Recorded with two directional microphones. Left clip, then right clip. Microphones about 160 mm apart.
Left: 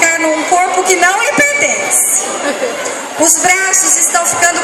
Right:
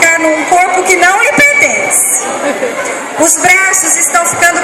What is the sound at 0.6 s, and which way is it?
A woman's voice, 15° right (ahead or behind).